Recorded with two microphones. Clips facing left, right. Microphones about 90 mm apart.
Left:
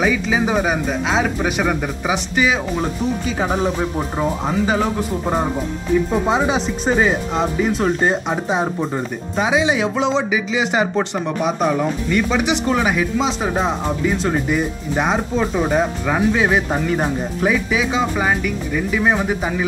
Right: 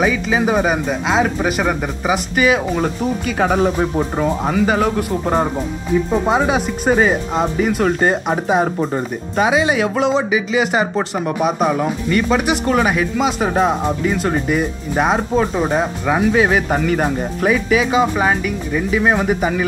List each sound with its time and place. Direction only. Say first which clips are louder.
0.0 s speech: right 1 dB; centre (ahead or behind)
3.3 s speech: right 7 dB; 65° right (ahead or behind)
4.6 s speech: right 2 dB; centre (ahead or behind)